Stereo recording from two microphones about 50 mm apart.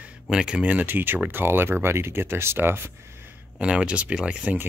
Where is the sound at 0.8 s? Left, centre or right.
Right.